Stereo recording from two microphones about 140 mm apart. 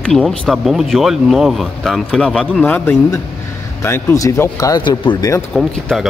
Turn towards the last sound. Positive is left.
turn(degrees=0)  # may be behind; listen again after turning